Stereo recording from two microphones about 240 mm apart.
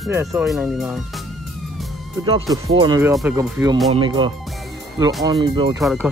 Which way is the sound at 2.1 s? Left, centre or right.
Centre.